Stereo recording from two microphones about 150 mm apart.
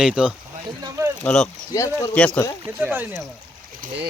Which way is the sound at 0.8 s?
20° right (ahead or behind).